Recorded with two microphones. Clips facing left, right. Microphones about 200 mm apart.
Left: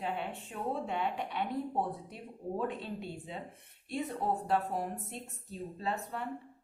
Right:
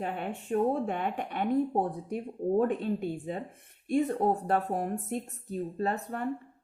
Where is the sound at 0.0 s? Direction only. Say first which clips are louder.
Right 3 dB; 50° right (ahead or behind).